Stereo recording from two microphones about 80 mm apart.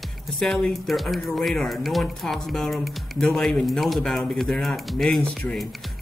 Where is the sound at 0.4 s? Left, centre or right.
Centre.